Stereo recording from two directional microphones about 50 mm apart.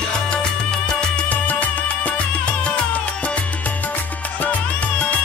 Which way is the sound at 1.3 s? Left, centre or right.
Left.